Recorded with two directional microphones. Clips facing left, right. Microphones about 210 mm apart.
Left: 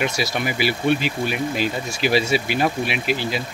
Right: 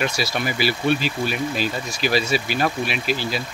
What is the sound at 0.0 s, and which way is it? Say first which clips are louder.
Speech: left 1 dB; 20° left (ahead or behind).